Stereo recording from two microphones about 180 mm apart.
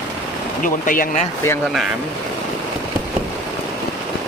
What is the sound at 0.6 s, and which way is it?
Speech, 50° left (ahead or behind).